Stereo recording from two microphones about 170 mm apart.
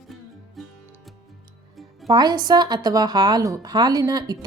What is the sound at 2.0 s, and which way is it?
A woman's voice, 25° right (ahead or behind).